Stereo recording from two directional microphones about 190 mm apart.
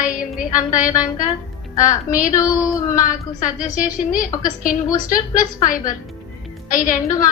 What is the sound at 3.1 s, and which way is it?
Music, 45° left (ahead or behind).